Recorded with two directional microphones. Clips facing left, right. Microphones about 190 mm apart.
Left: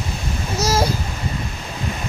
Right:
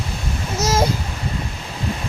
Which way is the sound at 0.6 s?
20° right (ahead or behind).